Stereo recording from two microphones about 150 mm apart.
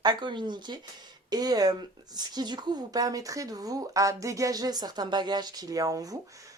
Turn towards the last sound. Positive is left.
turn(degrees=-20)  # may be behind; listen again after turning